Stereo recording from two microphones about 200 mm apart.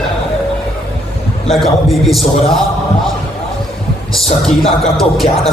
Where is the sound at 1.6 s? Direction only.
Centre (ahead or behind).